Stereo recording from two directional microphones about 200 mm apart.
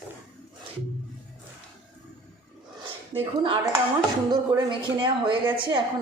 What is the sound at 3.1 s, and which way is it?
Speech, 25° right (ahead or behind).